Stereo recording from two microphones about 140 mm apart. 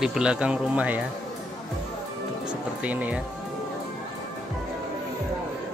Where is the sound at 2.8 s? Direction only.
10° right (ahead or behind).